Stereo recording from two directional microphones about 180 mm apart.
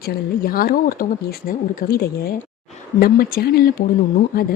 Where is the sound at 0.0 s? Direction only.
55° left (ahead or behind).